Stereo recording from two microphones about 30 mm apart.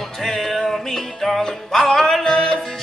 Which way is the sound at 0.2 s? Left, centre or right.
Centre.